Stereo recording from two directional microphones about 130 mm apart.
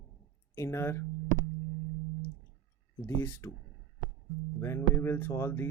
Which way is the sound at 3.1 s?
15° left (ahead or behind).